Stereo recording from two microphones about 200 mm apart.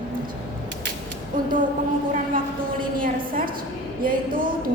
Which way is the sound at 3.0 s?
45° right (ahead or behind).